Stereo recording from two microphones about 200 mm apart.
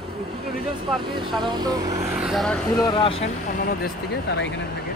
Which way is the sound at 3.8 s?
55° left (ahead or behind).